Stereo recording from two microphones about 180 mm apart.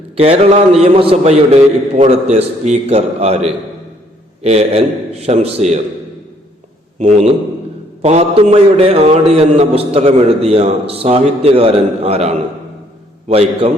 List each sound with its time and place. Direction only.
0.2 s a man's voice: 35° right (ahead or behind)
7.0 s a man's voice: 40° right (ahead or behind)